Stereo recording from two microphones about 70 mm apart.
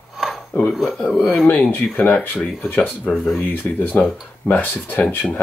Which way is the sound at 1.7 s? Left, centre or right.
Left.